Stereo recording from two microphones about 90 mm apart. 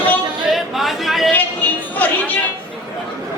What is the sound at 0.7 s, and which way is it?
Speech, centre (ahead or behind).